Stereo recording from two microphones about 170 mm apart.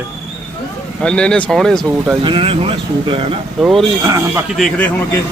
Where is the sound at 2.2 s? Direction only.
30° right (ahead or behind).